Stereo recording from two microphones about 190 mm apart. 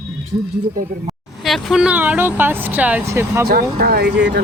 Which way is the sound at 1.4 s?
Centre (ahead or behind).